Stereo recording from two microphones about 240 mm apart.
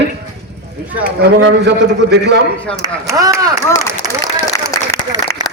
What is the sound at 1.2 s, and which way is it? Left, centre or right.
A man's voice, right.